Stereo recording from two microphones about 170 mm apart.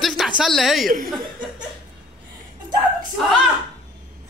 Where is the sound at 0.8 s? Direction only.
55° right (ahead or behind).